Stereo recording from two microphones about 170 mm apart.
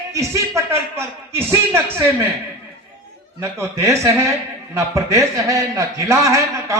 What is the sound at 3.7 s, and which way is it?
A man's voice, 15° right (ahead or behind).